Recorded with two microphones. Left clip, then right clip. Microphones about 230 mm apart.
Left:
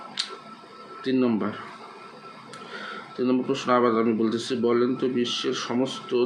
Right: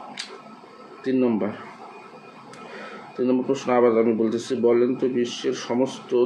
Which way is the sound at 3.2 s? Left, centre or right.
Left.